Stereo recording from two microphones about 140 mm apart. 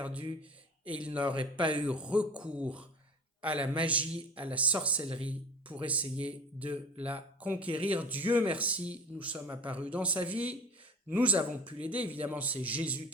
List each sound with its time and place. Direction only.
0.9 s speech: 10° right (ahead or behind)
1.4 s speech: 35° right (ahead or behind)
1.7 s speech: 10° right (ahead or behind)